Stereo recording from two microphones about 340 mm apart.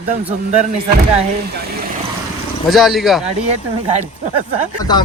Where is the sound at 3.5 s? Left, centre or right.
Centre.